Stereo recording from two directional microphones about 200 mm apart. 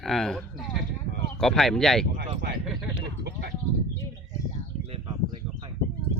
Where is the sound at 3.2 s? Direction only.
55° right (ahead or behind).